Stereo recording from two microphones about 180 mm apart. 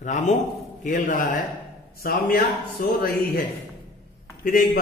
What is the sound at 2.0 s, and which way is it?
Speech, 55° left (ahead or behind).